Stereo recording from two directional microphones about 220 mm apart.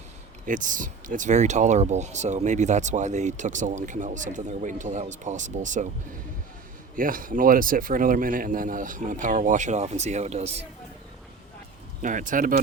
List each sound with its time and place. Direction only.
0.4 s speech: 35° right (ahead or behind)
6.9 s speech: 40° right (ahead or behind)
12.0 s speech: 35° right (ahead or behind)